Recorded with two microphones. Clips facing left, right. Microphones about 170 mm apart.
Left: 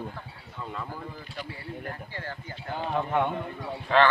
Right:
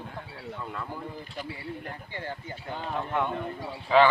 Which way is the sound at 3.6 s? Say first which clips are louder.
Right 2 dB; 10° right (ahead or behind).